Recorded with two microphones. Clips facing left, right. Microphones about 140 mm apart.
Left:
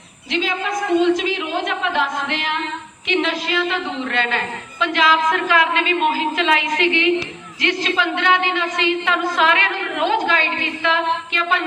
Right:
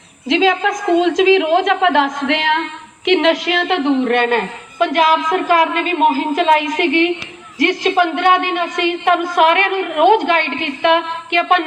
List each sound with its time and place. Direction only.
0.3 s a woman's voice: 90° right
3.1 s a woman's voice: 80° right
4.0 s a woman's voice: 50° right (ahead or behind)